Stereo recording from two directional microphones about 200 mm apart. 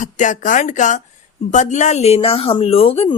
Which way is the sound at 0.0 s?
40° left (ahead or behind).